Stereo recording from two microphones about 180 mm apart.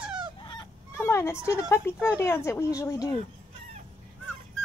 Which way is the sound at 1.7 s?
10° left (ahead or behind).